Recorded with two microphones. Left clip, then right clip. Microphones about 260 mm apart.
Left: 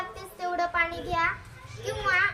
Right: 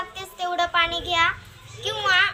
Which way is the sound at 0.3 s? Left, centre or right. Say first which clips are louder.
Right 5 dB; centre.